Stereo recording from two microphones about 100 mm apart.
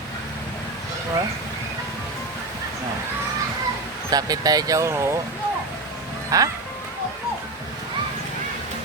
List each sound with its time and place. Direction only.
4.1 s speech: 40° right (ahead or behind)
6.3 s speech: 30° right (ahead or behind)